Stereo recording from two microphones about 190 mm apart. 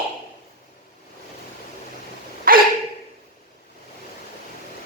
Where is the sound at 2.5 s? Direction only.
50° right (ahead or behind).